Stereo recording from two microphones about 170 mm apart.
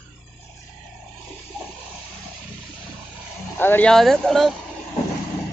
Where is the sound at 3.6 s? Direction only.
10° left (ahead or behind).